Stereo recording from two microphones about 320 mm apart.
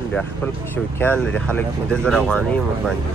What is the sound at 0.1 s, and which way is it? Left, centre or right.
Speech, centre.